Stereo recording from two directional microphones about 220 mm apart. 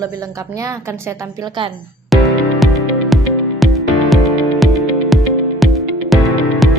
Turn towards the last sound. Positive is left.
turn(degrees=0)  # may be behind; listen again after turning